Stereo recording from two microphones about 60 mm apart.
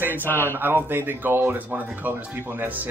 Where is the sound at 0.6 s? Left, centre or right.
Right.